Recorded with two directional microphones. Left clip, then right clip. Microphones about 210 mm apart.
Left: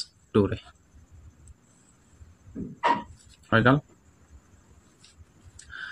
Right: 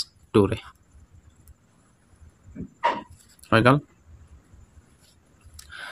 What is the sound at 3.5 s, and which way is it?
Speech, 40° right (ahead or behind).